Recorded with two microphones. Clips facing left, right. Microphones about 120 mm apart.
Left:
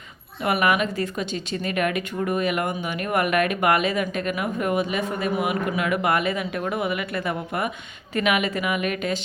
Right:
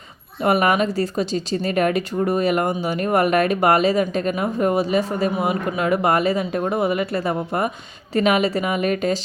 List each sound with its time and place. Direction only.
0.4 s speech: 35° right (ahead or behind)